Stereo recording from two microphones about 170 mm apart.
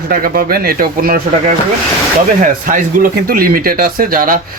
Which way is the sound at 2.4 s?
50° right (ahead or behind).